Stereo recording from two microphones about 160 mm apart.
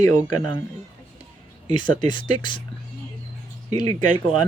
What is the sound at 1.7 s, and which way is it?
Speech, 30° left (ahead or behind).